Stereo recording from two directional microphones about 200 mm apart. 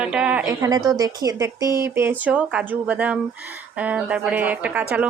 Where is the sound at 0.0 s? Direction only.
5° right (ahead or behind).